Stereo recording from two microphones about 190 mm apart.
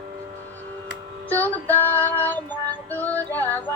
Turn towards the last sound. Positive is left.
turn(degrees=10)  # may be behind; listen again after turning